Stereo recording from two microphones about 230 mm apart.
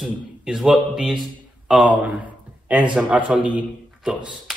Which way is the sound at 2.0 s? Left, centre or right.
Centre.